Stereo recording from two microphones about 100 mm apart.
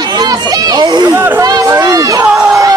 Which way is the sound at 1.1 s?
20° right (ahead or behind).